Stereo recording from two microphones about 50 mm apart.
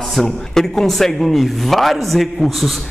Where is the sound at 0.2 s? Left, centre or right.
Centre.